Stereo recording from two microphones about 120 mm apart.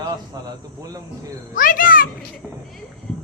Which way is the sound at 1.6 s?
90° left.